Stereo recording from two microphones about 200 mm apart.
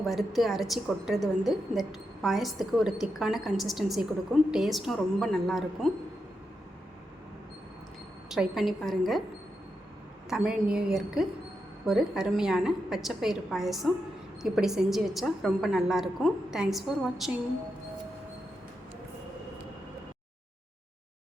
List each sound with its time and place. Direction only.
0.0 s a woman's voice: centre (ahead or behind)
8.3 s a woman's voice: centre (ahead or behind)
10.2 s a woman's voice: 5° right (ahead or behind)